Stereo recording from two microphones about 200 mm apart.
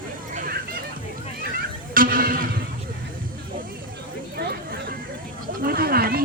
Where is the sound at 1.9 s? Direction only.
45° right (ahead or behind).